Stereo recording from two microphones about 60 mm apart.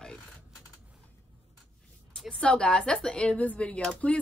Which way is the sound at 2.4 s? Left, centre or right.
Centre.